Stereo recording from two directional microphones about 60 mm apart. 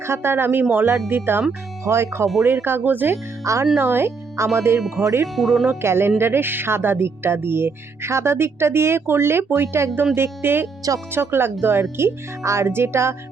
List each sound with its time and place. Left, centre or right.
0.0 s speech: right
1.8 s speech: right
3.4 s speech: right
3.8 s speech: right
5.2 s speech: centre
5.8 s speech: right